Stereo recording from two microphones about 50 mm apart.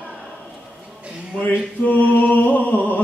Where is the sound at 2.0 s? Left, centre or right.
Left.